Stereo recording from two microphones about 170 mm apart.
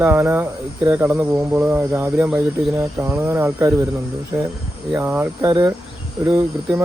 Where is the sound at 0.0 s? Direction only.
10° right (ahead or behind).